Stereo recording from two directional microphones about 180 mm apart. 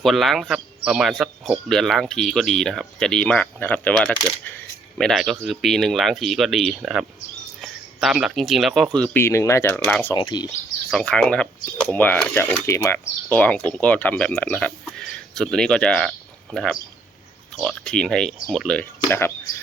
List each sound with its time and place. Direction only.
0.0 s speech: centre (ahead or behind)
9.2 s speech: 15° left (ahead or behind)
9.7 s speech: 5° left (ahead or behind)
10.2 s speech: 25° left (ahead or behind)
10.9 s speech: 5° left (ahead or behind)